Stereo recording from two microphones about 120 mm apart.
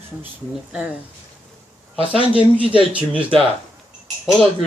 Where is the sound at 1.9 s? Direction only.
50° right (ahead or behind).